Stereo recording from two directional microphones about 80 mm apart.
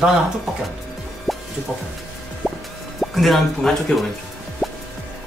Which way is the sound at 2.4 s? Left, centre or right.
Centre.